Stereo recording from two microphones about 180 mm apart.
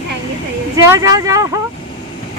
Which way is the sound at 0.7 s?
20° right (ahead or behind).